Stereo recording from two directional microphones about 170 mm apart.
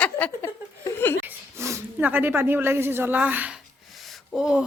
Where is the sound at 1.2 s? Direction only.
15° right (ahead or behind).